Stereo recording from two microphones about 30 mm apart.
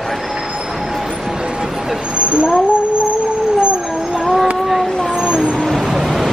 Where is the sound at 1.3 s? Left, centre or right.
Right.